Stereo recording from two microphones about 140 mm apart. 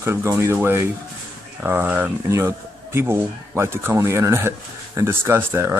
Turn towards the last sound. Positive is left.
turn(degrees=-15)  # may be behind; listen again after turning